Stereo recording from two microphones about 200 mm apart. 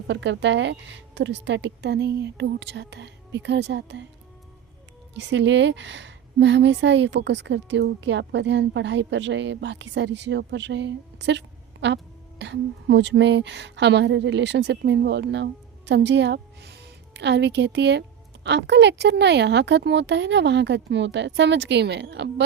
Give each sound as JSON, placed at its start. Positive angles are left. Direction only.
{"t": 0.1, "sound": "a woman's voice", "side_deg": -65}
{"t": 5.1, "sound": "a woman's voice", "side_deg": -60}